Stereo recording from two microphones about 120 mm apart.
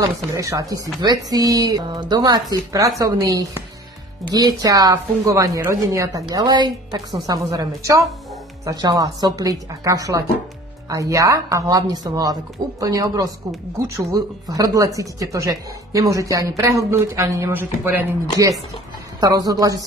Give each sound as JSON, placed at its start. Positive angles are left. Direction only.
{"t": 0.0, "sound": "speech", "side_deg": -30}
{"t": 19.1, "sound": "speech", "side_deg": -30}